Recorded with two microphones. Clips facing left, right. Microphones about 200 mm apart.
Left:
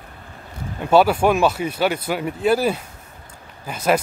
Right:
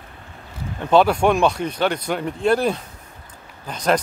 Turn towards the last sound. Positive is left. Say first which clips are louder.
# left 1 dB
turn(degrees=5)  # may be behind; listen again after turning